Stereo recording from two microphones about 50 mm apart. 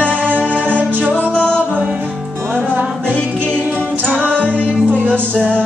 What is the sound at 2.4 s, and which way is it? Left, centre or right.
Music, right.